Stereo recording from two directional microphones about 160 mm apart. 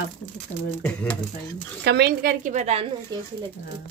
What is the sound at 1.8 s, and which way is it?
Speech, 90° right.